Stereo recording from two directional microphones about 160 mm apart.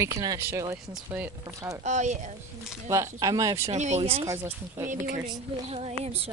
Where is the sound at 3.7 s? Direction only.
45° right (ahead or behind).